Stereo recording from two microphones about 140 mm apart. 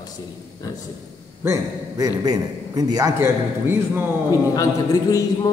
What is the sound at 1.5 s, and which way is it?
A man's voice, 25° right (ahead or behind).